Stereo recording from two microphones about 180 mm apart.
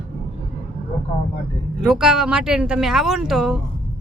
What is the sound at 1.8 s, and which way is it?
Speech, 5° right (ahead or behind).